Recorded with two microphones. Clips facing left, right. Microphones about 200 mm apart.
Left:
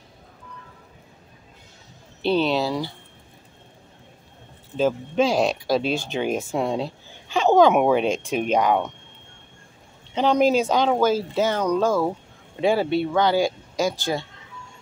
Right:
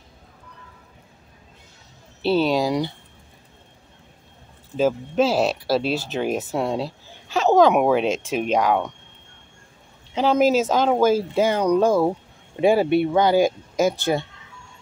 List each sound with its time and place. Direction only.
2.2 s speech: 10° right (ahead or behind)
4.7 s speech: 5° right (ahead or behind)
10.1 s speech: 5° right (ahead or behind); by 13.9 s 20° right (ahead or behind)